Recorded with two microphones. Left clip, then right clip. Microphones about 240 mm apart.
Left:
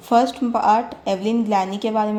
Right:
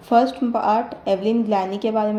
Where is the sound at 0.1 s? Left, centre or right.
Left.